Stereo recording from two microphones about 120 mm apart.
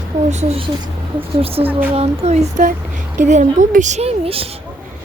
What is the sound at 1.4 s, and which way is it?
Speech, 50° right (ahead or behind).